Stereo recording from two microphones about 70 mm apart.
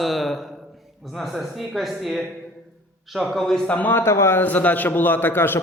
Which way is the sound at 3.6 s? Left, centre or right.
Left.